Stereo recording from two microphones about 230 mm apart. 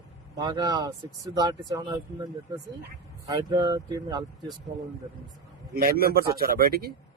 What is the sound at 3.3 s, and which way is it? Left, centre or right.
Speech, centre.